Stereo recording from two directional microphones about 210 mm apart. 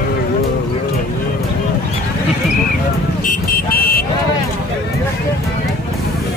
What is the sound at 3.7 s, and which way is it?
Vehicle, 45° left (ahead or behind).